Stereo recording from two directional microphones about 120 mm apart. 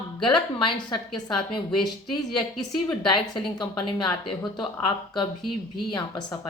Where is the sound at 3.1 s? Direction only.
40° left (ahead or behind).